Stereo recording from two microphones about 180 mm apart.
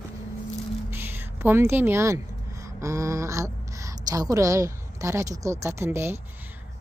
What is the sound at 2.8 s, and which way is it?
A woman's voice, 15° right (ahead or behind).